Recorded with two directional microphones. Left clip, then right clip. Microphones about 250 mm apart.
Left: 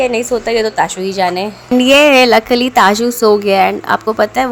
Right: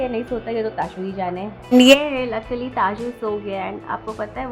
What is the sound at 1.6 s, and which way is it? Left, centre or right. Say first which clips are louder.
Speech: left 2 dB; centre.